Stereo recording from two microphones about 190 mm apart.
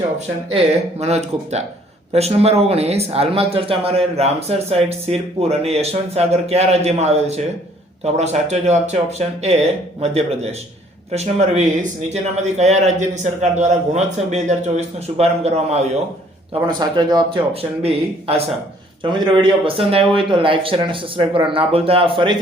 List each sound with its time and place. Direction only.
0.5 s speech: 35° right (ahead or behind)
16.6 s speech: 25° right (ahead or behind)